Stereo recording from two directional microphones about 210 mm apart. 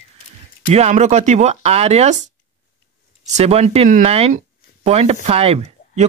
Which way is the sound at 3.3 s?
30° right (ahead or behind).